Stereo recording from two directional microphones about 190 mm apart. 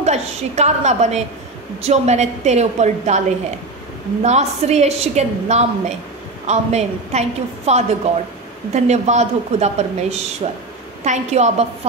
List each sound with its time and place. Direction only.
0.0 s a woman's voice: 35° right (ahead or behind)
4.2 s a woman's voice: 35° right (ahead or behind)